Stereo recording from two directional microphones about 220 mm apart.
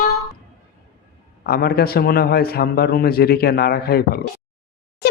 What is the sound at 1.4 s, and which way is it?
A man's voice, 45° left (ahead or behind).